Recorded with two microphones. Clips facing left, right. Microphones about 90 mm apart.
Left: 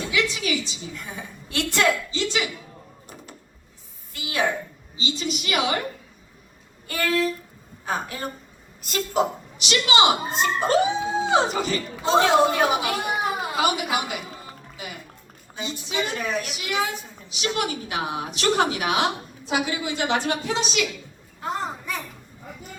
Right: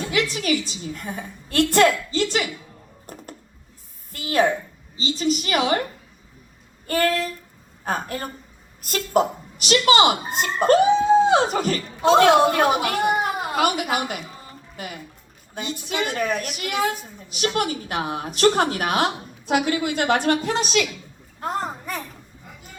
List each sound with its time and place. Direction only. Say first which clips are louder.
0.3 s a woman's voice: right 4 dB; 45° right (ahead or behind)
3.1 s a sound: right 5 dB; 50° right (ahead or behind)
4.1 s a woman's voice: right 5 dB; 45° right (ahead or behind)
6.8 s a woman's voice: right 2 dB; 45° right (ahead or behind)